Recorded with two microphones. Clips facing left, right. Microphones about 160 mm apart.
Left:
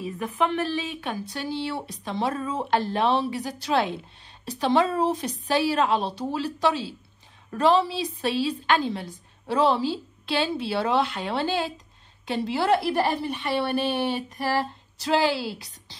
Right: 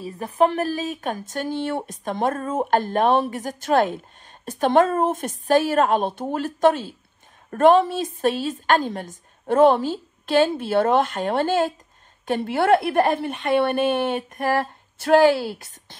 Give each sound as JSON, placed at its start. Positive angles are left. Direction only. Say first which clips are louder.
{"t": 0.0, "sound": "a woman's voice", "louder": "right 6 dB", "side_deg": -40}